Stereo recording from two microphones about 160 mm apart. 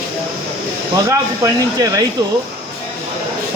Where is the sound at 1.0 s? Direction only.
20° right (ahead or behind).